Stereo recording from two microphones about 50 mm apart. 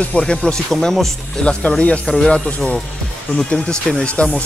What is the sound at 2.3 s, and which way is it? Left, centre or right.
Speech, left.